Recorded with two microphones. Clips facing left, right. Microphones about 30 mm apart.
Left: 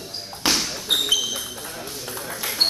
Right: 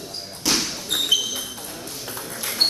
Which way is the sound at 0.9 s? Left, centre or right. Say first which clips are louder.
Right 1 dB; centre.